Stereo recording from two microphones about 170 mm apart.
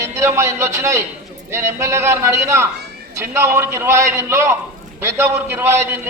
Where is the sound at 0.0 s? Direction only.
15° right (ahead or behind).